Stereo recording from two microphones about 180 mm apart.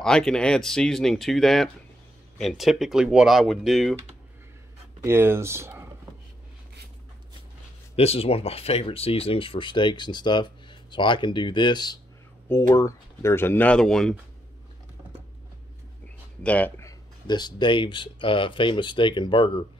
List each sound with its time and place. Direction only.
0.0 s speech: 5° left (ahead or behind)
5.0 s speech: 15° right (ahead or behind)
7.9 s speech: 35° left (ahead or behind); by 14.1 s 5° left (ahead or behind)
16.4 s speech: 10° left (ahead or behind); by 19.6 s 25° left (ahead or behind)